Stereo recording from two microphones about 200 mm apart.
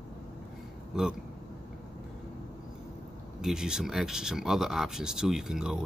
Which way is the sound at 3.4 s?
5° right (ahead or behind).